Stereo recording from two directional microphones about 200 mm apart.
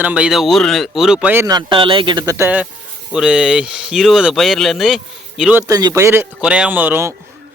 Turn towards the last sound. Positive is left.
turn(degrees=-10)  # may be behind; listen again after turning